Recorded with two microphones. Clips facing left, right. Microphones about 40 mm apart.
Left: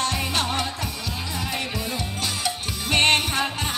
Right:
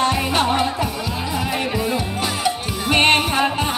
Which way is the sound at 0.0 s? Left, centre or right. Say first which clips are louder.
Right 7 dB; centre.